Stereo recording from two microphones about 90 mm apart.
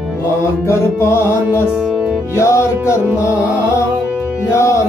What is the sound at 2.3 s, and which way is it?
Music, 30° left (ahead or behind).